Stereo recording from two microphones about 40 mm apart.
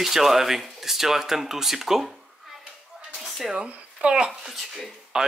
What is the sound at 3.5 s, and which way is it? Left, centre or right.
Speech, right.